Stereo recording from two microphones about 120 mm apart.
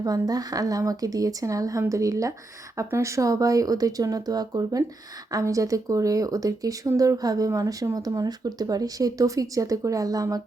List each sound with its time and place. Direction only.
0.0 s speech: 30° right (ahead or behind)